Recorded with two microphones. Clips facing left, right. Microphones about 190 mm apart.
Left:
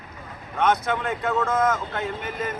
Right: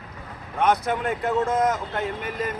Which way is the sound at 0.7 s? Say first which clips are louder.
Right 1 dB; 35° right (ahead or behind).